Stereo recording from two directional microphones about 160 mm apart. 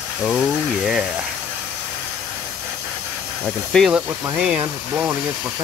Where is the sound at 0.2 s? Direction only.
5° right (ahead or behind).